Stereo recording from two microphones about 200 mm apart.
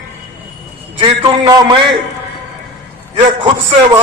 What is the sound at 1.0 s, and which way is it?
Speech, 20° right (ahead or behind).